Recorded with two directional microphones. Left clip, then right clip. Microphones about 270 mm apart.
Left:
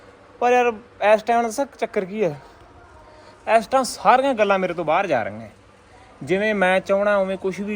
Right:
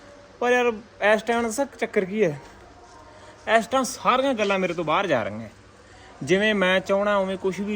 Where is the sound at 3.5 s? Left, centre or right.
Centre.